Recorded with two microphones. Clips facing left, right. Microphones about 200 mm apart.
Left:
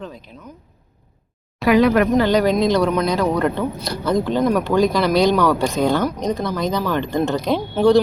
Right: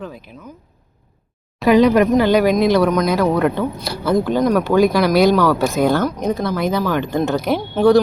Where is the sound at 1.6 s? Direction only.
20° right (ahead or behind).